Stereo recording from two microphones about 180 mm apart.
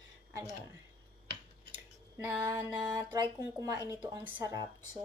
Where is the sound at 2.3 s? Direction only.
15° right (ahead or behind).